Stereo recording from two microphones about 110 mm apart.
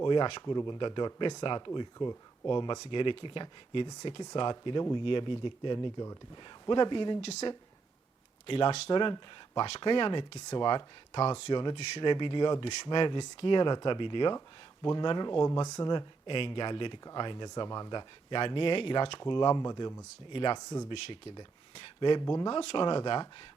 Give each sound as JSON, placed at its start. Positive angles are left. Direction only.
{"t": 0.0, "sound": "speech", "side_deg": 45}
{"t": 7.2, "sound": "speech", "side_deg": 85}
{"t": 8.4, "sound": "speech", "side_deg": 55}
{"t": 20.3, "sound": "speech", "side_deg": 50}
{"t": 20.6, "sound": "speech", "side_deg": 35}
{"t": 20.9, "sound": "speech", "side_deg": 50}
{"t": 22.2, "sound": "speech", "side_deg": 35}
{"t": 22.4, "sound": "speech", "side_deg": 50}